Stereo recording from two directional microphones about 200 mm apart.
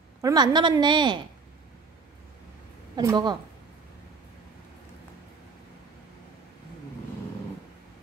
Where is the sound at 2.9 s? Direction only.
20° right (ahead or behind).